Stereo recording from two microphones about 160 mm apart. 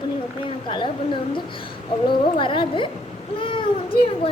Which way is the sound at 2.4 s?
30° left (ahead or behind).